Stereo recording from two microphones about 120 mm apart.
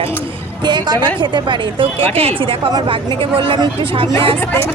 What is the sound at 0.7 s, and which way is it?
A woman's voice, 35° right (ahead or behind).